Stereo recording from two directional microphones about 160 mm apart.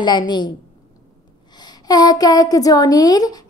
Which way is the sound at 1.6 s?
25° left (ahead or behind).